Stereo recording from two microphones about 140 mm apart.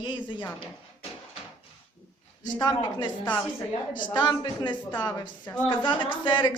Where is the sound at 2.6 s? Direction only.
30° left (ahead or behind).